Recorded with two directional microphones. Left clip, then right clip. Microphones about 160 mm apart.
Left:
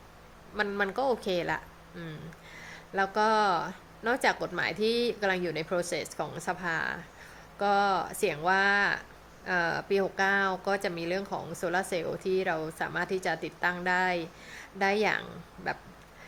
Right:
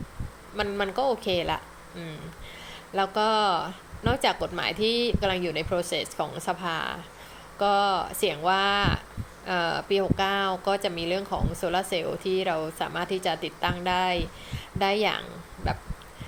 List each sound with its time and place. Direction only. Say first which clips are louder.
0.5 s speech: right 2 dB; 15° left (ahead or behind)